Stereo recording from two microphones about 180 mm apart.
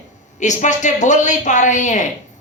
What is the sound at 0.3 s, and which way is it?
Speech, 40° left (ahead or behind).